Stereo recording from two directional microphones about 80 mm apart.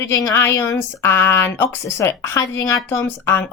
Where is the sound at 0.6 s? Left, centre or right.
Left.